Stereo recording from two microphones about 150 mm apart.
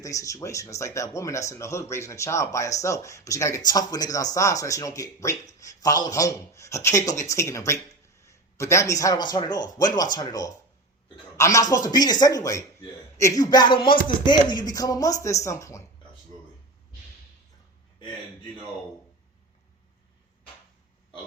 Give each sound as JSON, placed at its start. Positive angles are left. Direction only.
{"t": 0.0, "sound": "a man's voice", "side_deg": 20}